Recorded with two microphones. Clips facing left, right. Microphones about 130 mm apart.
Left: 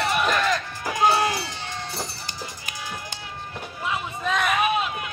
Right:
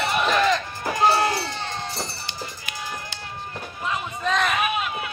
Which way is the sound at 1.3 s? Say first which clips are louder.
Right 2 dB; 55° right (ahead or behind).